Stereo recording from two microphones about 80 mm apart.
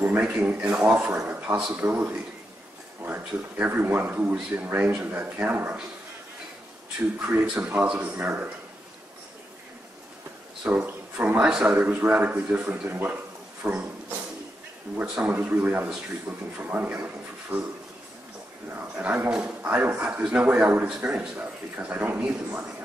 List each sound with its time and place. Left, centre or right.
0.0 s speech: right
7.2 s speech: centre
10.6 s speech: centre
12.8 s speech: right
15.3 s speech: right
18.7 s speech: centre